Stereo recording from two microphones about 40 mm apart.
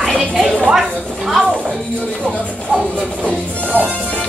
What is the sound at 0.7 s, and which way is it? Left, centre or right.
Speech, centre.